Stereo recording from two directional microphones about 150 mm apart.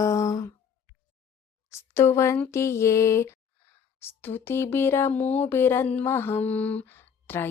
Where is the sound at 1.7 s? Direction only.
20° left (ahead or behind).